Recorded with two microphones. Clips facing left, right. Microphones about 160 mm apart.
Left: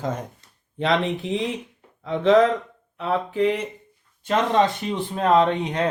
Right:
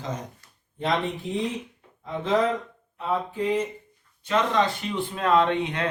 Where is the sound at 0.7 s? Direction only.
80° left.